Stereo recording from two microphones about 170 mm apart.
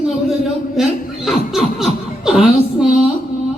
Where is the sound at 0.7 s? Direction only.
Centre (ahead or behind).